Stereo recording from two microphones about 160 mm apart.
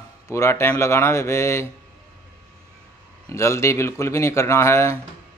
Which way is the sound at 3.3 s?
20° left (ahead or behind).